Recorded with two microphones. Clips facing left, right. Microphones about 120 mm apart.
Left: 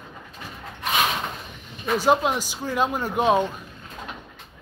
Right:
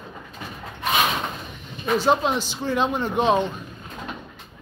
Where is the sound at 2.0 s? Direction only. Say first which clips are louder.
Left 2 dB; 10° left (ahead or behind).